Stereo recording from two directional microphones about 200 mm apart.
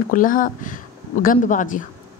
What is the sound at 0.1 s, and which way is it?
A woman's voice, 40° left (ahead or behind).